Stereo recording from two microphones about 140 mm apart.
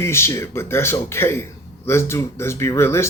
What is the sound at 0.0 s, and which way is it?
A man's voice, 20° left (ahead or behind).